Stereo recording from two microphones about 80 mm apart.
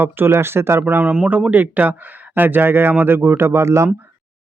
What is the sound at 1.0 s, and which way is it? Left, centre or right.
Speech, centre.